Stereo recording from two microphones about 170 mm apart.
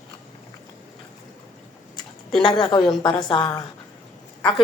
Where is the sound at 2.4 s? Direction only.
25° left (ahead or behind).